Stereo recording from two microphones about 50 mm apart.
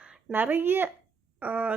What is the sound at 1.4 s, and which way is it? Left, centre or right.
Speech, right.